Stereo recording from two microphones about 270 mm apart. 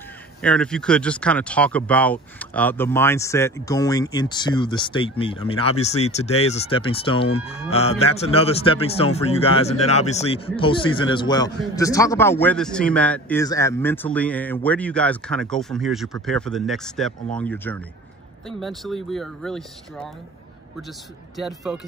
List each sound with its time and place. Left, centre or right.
0.4 s speech: centre